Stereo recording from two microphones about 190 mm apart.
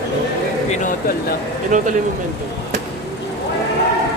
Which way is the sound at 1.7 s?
40° right (ahead or behind).